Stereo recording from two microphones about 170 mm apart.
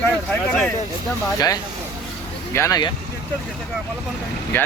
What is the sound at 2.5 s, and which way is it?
Speech, 20° left (ahead or behind).